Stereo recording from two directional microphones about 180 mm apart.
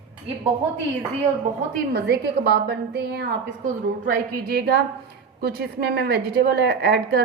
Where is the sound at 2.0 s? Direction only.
65° right (ahead or behind).